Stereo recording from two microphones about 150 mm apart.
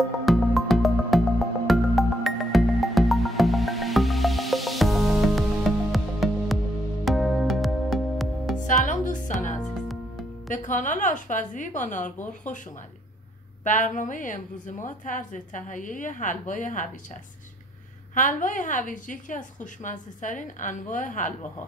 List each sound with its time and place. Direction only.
0.2 s music: centre (ahead or behind)
8.6 s music: 60° left (ahead or behind)
9.6 s music: centre (ahead or behind)
10.5 s a woman's voice: 60° left (ahead or behind)
13.7 s a woman's voice: 60° left (ahead or behind)